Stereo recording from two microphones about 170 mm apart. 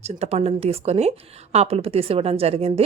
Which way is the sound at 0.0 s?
40° right (ahead or behind).